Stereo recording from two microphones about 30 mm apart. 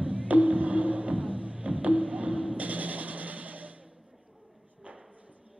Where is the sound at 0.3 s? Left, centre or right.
Right.